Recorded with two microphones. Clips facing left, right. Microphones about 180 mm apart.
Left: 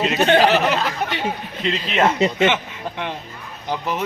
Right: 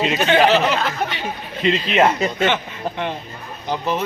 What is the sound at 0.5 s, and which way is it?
Speech, 15° left (ahead or behind).